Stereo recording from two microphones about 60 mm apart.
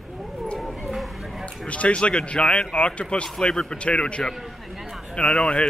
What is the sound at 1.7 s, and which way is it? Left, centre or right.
Speech, left.